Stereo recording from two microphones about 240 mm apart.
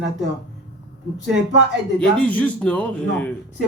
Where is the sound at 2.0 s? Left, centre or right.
Centre.